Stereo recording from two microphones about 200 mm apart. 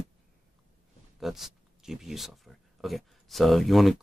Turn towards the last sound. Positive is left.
turn(degrees=0)  # may be behind; listen again after turning